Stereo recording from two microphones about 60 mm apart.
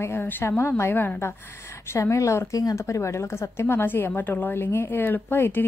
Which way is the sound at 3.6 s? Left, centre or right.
Left.